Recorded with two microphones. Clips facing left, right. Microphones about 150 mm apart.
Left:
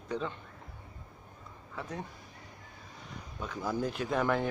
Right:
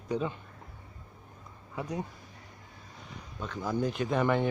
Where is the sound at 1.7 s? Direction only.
15° right (ahead or behind).